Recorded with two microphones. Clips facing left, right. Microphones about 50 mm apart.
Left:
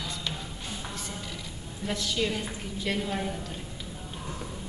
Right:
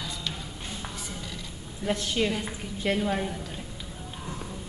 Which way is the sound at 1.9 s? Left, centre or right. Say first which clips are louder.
Right 3 dB; right.